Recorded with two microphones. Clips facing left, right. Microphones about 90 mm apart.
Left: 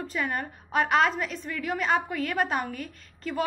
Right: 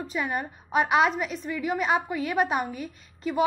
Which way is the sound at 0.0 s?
10° right (ahead or behind).